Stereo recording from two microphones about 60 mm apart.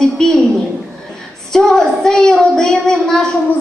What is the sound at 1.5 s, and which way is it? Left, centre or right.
Child singing, centre.